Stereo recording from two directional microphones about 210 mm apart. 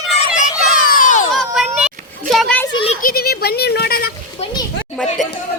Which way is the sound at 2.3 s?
5° left (ahead or behind).